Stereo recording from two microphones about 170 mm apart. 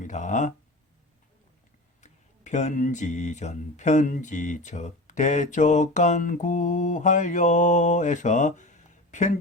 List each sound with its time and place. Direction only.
0.0 s speech: 45° left (ahead or behind)
2.0 s speech: 45° left (ahead or behind)